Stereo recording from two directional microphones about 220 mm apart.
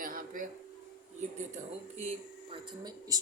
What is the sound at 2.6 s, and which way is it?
Speech, 20° right (ahead or behind).